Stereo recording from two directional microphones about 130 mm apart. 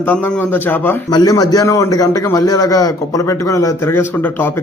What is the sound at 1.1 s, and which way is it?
A man's voice, 30° left (ahead or behind).